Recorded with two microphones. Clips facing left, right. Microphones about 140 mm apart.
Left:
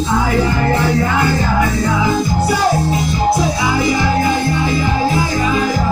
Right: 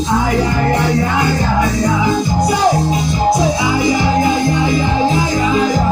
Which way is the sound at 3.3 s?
15° right (ahead or behind).